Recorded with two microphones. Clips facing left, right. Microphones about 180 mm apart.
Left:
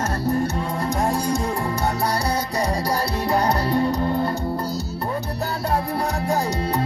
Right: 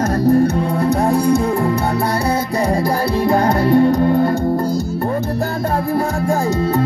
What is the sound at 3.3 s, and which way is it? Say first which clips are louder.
Music: right 6 dB; 50° right (ahead or behind).